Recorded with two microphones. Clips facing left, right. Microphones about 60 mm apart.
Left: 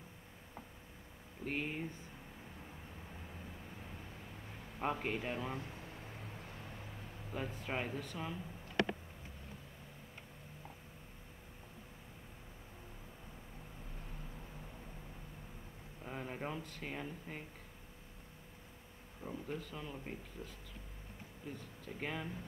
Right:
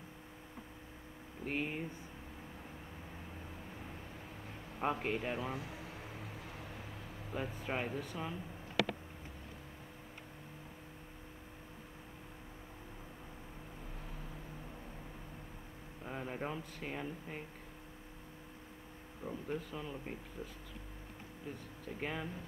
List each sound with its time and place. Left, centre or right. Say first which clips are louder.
1.4 s speech: right 1 dB; centre
4.7 s speech: right 2 dB; centre
5.7 s vehicle: right 3 dB; right
7.3 s speech: right 2 dB; centre
16.0 s speech: right 2 dB; centre
19.2 s speech: right 3 dB; centre
20.4 s speech: right 3 dB; right
21.8 s speech: right 2 dB; centre